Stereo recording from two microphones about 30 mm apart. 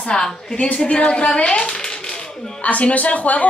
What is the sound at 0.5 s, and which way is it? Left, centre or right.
A woman's voice, left.